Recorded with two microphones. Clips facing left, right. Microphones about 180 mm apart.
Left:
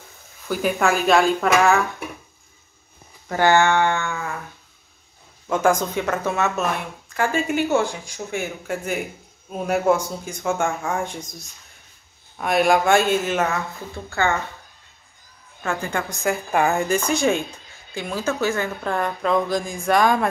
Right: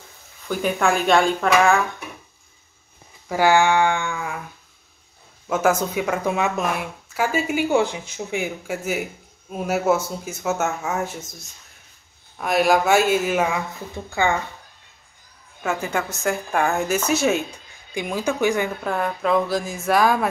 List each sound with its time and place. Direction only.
0.5 s a woman's voice: 5° left (ahead or behind)
3.3 s a woman's voice: 10° right (ahead or behind)
5.5 s a woman's voice: 5° right (ahead or behind)
15.6 s a woman's voice: 5° right (ahead or behind)
18.9 s a woman's voice: 5° right (ahead or behind)